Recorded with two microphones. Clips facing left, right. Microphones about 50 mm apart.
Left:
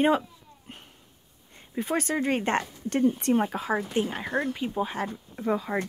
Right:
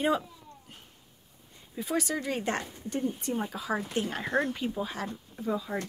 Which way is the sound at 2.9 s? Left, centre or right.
Left.